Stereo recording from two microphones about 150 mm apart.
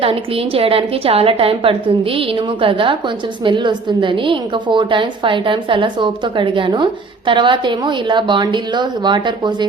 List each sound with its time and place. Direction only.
0.0 s a woman's voice: 40° right (ahead or behind)